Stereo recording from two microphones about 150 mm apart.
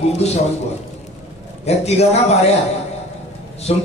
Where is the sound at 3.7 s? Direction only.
45° left (ahead or behind).